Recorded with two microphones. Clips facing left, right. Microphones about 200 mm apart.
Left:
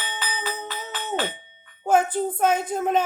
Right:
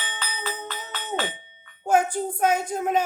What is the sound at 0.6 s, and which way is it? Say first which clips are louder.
Music: left 2 dB; 10° left (ahead or behind).